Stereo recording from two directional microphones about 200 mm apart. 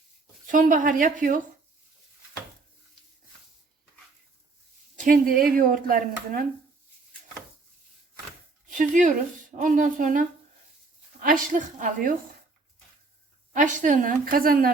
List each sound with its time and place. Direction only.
0.4 s a woman's voice: 40° right (ahead or behind)
4.9 s speech: 45° right (ahead or behind)
8.7 s speech: 40° right (ahead or behind)
13.5 s a woman's voice: 40° right (ahead or behind)